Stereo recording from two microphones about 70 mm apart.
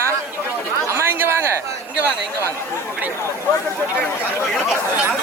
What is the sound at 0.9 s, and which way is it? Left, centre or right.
Chatter, right.